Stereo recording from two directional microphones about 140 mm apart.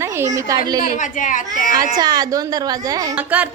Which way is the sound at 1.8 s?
25° right (ahead or behind).